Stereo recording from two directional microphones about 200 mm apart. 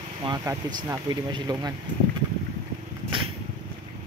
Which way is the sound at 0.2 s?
20° right (ahead or behind).